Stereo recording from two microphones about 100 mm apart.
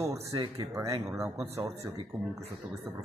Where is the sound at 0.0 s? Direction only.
30° right (ahead or behind).